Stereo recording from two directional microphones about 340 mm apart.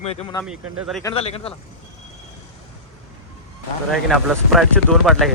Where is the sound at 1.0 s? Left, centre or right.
Centre.